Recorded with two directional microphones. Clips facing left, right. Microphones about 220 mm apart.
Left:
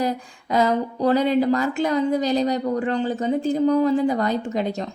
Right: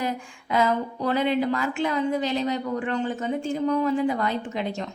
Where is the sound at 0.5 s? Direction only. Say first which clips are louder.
Left 3 dB; 40° left (ahead or behind).